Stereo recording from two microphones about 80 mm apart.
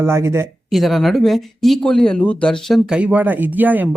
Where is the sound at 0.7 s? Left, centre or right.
Centre.